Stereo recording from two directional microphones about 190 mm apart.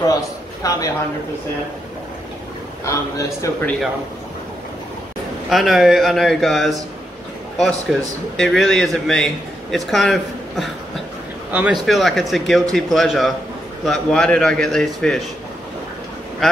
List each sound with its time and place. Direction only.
0.0 s a man's voice: 20° left (ahead or behind)
2.8 s a man's voice: 15° left (ahead or behind)
5.5 s a man's voice: centre (ahead or behind)